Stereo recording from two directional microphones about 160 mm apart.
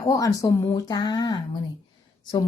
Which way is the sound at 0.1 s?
20° left (ahead or behind).